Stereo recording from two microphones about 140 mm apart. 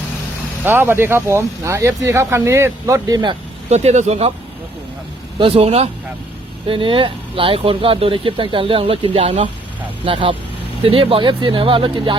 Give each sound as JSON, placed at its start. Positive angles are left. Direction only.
{"t": 0.6, "sound": "speech", "side_deg": -15}
{"t": 3.7, "sound": "speech", "side_deg": -50}
{"t": 5.4, "sound": "speech", "side_deg": -45}